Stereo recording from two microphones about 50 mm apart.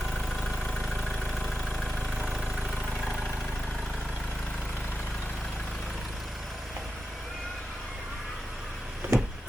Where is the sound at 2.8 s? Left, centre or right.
Centre.